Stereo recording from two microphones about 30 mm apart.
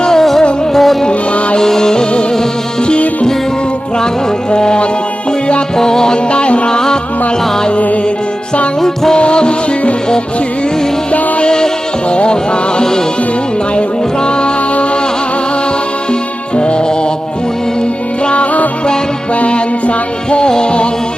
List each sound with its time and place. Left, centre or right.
0.2 s music: centre
1.5 s music: left
4.5 s music: left
6.7 s music: left
9.1 s music: left
11.4 s music: left
14.3 s music: left
16.6 s music: left
19.4 s music: left